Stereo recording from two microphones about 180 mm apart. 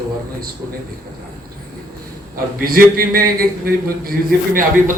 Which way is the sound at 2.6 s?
55° right (ahead or behind).